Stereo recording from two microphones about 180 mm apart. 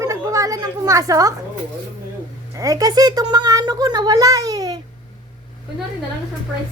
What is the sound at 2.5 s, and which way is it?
A woman's voice, 20° right (ahead or behind).